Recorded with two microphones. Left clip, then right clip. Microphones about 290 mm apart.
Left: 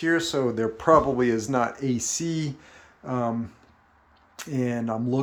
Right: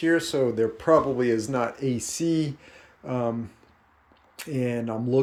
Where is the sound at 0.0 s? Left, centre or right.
Centre.